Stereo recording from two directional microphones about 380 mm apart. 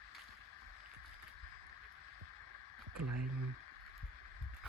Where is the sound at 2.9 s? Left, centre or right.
Right.